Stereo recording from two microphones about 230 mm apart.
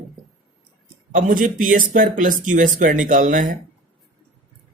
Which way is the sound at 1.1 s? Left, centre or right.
Right.